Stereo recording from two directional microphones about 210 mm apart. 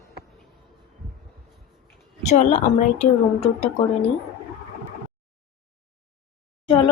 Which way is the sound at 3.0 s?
30° left (ahead or behind).